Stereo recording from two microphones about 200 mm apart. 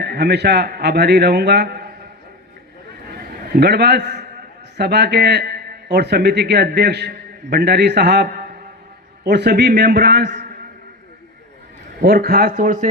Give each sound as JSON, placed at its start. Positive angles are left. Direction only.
{"t": 0.0, "sound": "a man's voice", "side_deg": -55}
{"t": 3.1, "sound": "a sound", "side_deg": -50}
{"t": 4.8, "sound": "a man's voice", "side_deg": -55}
{"t": 11.9, "sound": "speech", "side_deg": -50}